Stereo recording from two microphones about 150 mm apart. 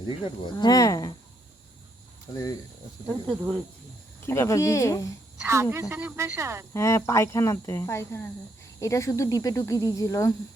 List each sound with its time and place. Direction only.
0.0 s speech: 30° left (ahead or behind)
2.3 s speech: 25° left (ahead or behind)
4.3 s speech: 20° left (ahead or behind)
5.5 s speech: 20° right (ahead or behind)
6.7 s speech: 20° left (ahead or behind)